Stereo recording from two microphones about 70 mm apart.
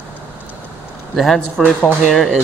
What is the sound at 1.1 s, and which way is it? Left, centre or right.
Speech, centre.